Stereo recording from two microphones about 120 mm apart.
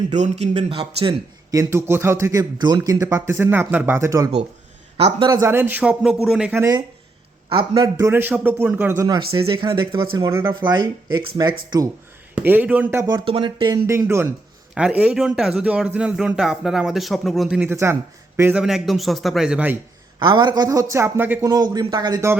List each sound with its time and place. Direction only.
0.1 s a man's voice: 70° right (ahead or behind); by 1.1 s 50° right (ahead or behind)
1.5 s speech: 25° right (ahead or behind)
4.9 s a man's voice: 55° right (ahead or behind)
5.3 s a man's voice: 25° right (ahead or behind); by 6.5 s 5° right (ahead or behind)
6.5 s speech: 20° right (ahead or behind)
8.1 s a man's voice: 15° right (ahead or behind)
9.0 s speech: 35° right (ahead or behind)
12.3 s a man's voice: 15° right (ahead or behind)
13.2 s speech: 45° right (ahead or behind)
14.0 s speech: 25° right (ahead or behind)
14.8 s a man's voice: 10° right (ahead or behind)
17.6 s speech: 20° right (ahead or behind)
18.6 s a man's voice: centre (ahead or behind)
20.1 s speech: 40° right (ahead or behind)